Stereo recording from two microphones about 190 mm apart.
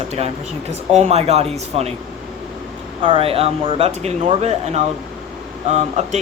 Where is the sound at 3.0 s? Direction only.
30° right (ahead or behind).